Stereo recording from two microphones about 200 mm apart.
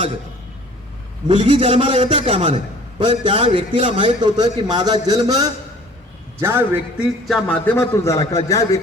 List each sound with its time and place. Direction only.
1.3 s a man's voice: 25° right (ahead or behind)
7.3 s a man's voice: 5° left (ahead or behind)